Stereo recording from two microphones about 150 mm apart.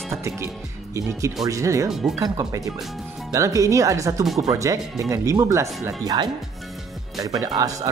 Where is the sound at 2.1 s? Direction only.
25° right (ahead or behind).